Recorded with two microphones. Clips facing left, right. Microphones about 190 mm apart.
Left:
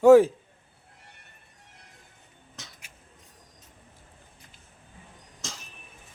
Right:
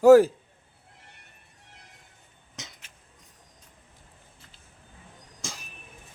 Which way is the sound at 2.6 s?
20° right (ahead or behind).